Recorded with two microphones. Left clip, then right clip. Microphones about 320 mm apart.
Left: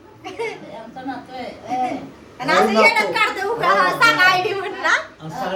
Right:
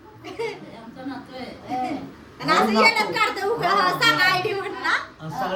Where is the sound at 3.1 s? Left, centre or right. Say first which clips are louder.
Left 3 dB; centre.